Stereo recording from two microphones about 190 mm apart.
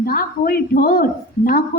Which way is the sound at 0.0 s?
50° left (ahead or behind).